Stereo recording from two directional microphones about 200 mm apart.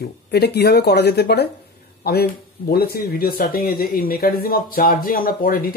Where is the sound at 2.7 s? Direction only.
50° left (ahead or behind).